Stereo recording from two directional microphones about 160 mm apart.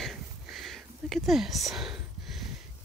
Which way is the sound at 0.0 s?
Centre (ahead or behind).